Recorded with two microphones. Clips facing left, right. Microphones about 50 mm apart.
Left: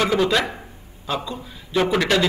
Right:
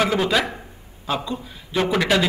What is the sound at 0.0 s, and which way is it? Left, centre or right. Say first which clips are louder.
A man's voice: left 1 dB; centre.